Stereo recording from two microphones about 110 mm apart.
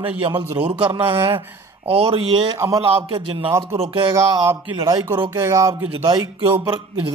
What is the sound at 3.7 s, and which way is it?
Speech, 65° right (ahead or behind).